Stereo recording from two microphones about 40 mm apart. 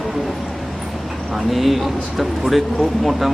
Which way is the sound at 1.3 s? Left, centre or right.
Centre.